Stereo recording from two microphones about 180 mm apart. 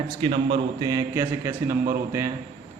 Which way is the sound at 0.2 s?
30° right (ahead or behind).